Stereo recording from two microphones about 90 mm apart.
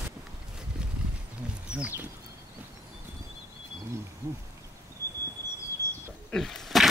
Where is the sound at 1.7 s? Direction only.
15° right (ahead or behind).